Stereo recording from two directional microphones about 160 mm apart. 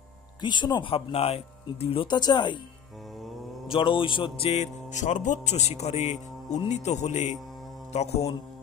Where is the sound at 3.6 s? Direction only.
35° left (ahead or behind).